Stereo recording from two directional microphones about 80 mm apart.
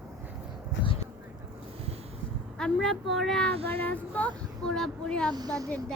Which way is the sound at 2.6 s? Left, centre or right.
Centre.